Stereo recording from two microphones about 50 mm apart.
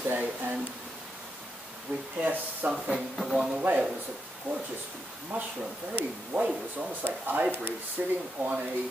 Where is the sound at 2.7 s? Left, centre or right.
Centre.